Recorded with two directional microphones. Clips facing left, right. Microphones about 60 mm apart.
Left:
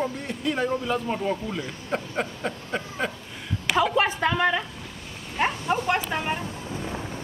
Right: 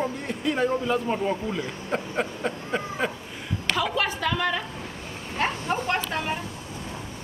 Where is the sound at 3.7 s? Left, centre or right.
Left.